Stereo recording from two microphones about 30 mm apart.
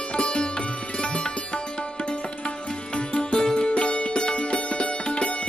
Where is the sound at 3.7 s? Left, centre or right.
Left.